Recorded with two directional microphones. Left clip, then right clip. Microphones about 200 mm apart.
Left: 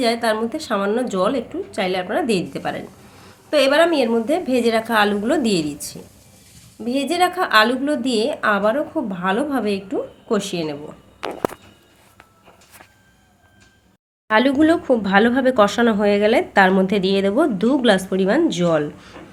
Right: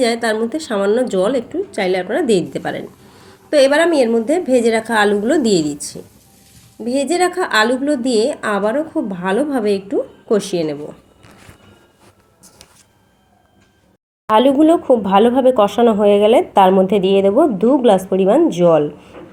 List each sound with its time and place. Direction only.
0.0 s a woman's voice: 10° right (ahead or behind)
14.3 s a woman's voice: 5° right (ahead or behind)
17.1 s a woman's voice: 35° left (ahead or behind)
18.2 s a woman's voice: 5° right (ahead or behind)